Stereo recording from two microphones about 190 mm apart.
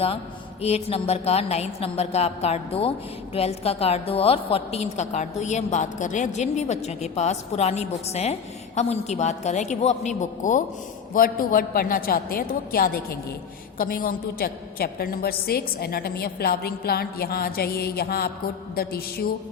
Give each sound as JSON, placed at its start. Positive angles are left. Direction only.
{"t": 0.6, "sound": "a woman's voice", "side_deg": 30}